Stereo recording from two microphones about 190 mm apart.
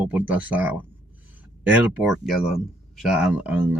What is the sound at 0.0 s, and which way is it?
Speech, 10° right (ahead or behind).